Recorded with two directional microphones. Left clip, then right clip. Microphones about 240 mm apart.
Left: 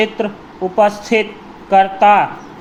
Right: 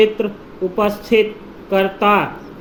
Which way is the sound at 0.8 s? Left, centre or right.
Centre.